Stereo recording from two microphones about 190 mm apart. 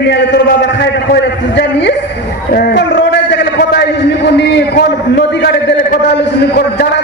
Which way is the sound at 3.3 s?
65° left (ahead or behind).